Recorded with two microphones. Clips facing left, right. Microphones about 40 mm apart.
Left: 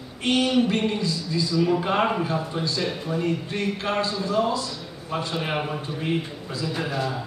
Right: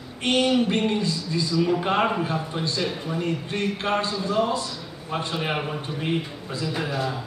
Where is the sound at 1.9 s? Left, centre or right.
Centre.